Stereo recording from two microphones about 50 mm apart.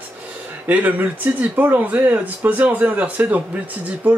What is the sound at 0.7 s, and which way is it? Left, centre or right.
Speech, right.